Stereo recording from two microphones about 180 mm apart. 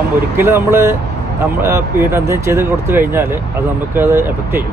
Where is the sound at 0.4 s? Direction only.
15° right (ahead or behind).